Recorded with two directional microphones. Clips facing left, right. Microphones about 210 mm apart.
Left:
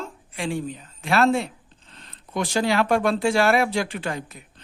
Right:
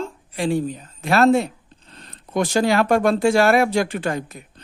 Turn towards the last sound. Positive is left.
turn(degrees=-45)  # may be behind; listen again after turning